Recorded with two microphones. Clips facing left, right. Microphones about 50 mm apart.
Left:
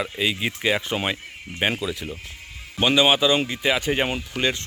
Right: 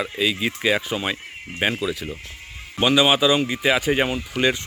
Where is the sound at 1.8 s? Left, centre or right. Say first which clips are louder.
Right 2 dB; centre.